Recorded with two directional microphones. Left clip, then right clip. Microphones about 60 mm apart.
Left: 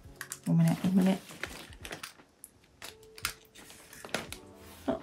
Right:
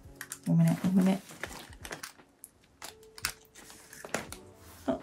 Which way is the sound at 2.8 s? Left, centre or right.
Right.